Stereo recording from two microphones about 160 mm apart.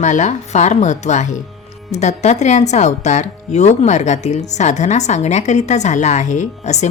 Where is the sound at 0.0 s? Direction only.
50° left (ahead or behind).